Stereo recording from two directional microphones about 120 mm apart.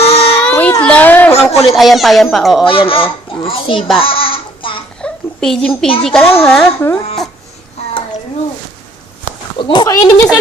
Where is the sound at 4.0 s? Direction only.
50° left (ahead or behind).